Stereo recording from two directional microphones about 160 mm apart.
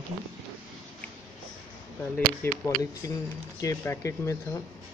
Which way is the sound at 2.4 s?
20° left (ahead or behind).